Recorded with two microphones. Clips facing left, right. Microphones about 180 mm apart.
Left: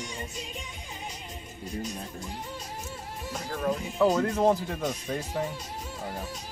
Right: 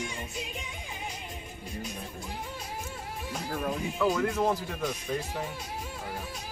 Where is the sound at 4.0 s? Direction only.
45° left (ahead or behind).